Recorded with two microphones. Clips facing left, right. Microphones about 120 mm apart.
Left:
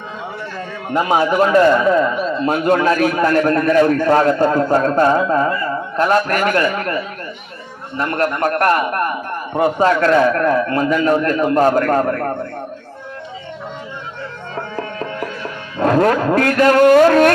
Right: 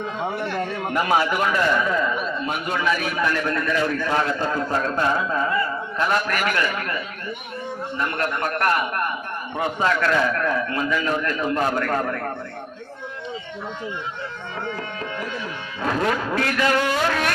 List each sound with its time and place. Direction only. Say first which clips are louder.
0.3 s a sound: right 2 dB; 70° right (ahead or behind)
0.9 s speech: left 5 dB; 25° left (ahead or behind)
1.3 s speech: left 9 dB; 35° left (ahead or behind)
2.2 s a sound: left 8 dB; 35° left (ahead or behind)
2.6 s a man's voice: left 10 dB; 55° left (ahead or behind)
14.5 s music: left 5 dB; 40° left (ahead or behind)
15.8 s a man's voice: left 9 dB; 50° left (ahead or behind)